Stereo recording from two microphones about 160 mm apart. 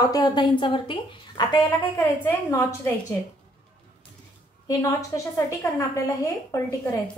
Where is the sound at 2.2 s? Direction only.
15° left (ahead or behind).